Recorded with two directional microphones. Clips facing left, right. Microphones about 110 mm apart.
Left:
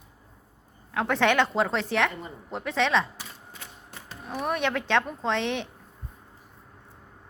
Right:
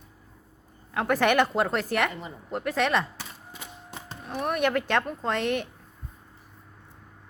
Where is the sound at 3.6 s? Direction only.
15° right (ahead or behind).